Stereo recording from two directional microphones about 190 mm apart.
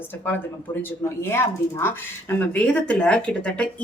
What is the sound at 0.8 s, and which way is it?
A woman's voice, 10° left (ahead or behind).